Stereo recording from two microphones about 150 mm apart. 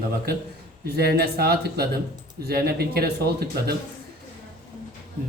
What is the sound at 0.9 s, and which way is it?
A man's voice, 90° right.